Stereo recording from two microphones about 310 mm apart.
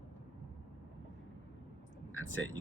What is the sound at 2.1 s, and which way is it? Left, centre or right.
Speech, left.